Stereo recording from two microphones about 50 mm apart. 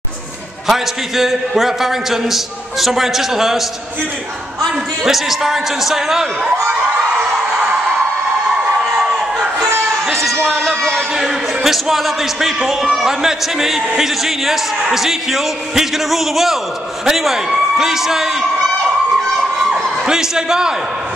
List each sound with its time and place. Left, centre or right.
0.7 s a man's voice: centre
5.0 s a man's voice: centre
8.5 s a sound: centre
9.7 s a sound: right
10.7 s speech: centre
11.1 s a man's voice: centre
20.1 s a man's voice: centre